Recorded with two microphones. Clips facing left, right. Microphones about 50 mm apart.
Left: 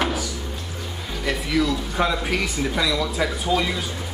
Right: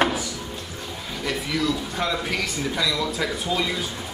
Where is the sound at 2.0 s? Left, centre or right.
Centre.